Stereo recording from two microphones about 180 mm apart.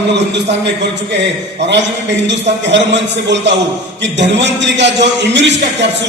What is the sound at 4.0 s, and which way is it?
A man's voice, 80° right.